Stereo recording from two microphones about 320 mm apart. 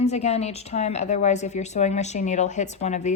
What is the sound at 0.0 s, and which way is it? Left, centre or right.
A woman's voice, left.